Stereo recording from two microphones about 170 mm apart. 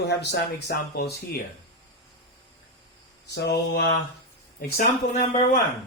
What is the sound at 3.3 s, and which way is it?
Mantra, 85° left.